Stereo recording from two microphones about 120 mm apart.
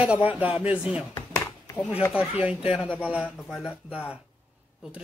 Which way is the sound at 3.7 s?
15° left (ahead or behind).